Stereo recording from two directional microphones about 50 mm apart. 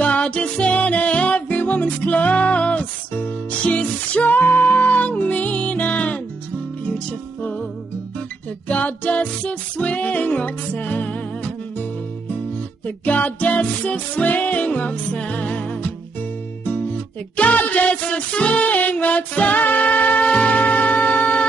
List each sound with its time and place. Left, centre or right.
0.0 s music: left
8.6 s music: left